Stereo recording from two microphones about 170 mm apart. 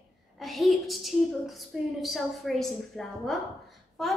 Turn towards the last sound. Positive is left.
turn(degrees=0)  # may be behind; listen again after turning